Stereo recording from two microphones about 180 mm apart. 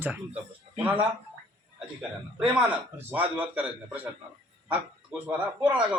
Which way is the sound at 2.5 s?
10° right (ahead or behind).